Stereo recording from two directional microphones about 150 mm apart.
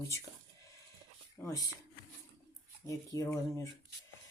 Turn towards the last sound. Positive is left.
turn(degrees=20)  # may be behind; listen again after turning